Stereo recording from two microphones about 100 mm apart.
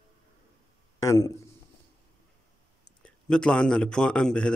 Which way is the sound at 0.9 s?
35° left (ahead or behind).